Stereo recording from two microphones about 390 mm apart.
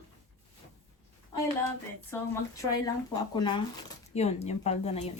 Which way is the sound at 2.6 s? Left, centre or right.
Centre.